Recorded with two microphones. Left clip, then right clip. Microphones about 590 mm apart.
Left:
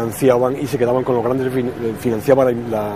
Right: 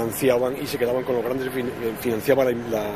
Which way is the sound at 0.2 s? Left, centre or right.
Left.